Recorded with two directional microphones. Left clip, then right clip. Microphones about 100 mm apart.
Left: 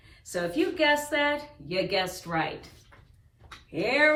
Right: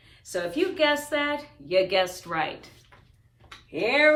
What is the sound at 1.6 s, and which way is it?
Speech, 35° right (ahead or behind).